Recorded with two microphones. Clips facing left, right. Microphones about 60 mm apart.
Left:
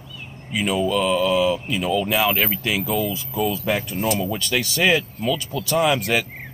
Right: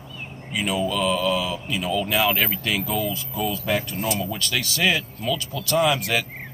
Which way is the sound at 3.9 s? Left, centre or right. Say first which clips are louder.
Left 3 dB; centre.